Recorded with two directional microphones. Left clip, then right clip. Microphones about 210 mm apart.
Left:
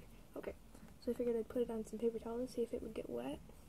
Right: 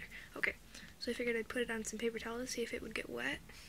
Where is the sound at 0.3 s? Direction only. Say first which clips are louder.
Right 10 dB; 35° right (ahead or behind).